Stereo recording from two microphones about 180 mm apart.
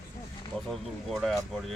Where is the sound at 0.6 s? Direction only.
Centre (ahead or behind).